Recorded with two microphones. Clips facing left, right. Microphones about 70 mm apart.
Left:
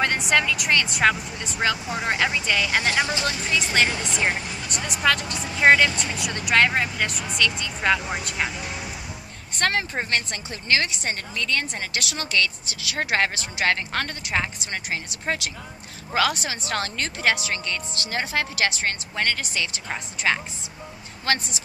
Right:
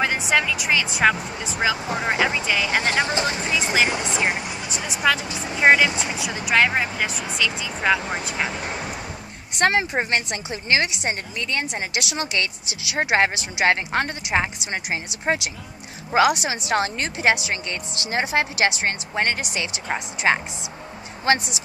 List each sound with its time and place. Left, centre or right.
0.0 s a woman's voice: centre
2.8 s a woman's voice: right
4.6 s a woman's voice: centre
6.1 s a woman's voice: centre
8.5 s speech: right
9.6 s a woman's voice: right